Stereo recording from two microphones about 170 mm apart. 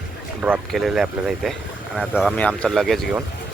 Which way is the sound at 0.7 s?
Centre (ahead or behind).